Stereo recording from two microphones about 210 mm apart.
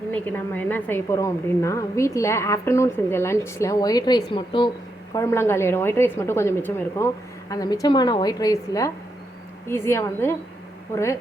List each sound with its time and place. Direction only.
0.1 s a woman's voice: 10° left (ahead or behind); by 4.7 s 25° left (ahead or behind)
5.1 s a woman's voice: 15° left (ahead or behind)